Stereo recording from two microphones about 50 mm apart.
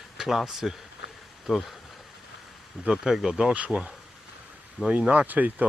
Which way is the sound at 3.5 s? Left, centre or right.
Right.